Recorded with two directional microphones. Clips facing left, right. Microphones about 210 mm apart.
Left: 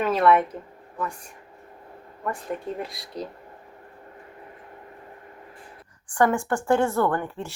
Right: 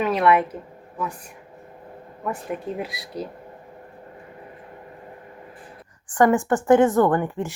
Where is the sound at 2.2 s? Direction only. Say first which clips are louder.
Right 2 dB; 5° right (ahead or behind).